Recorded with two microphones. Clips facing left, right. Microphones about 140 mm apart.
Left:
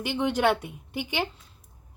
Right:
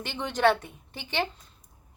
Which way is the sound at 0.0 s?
10° left (ahead or behind).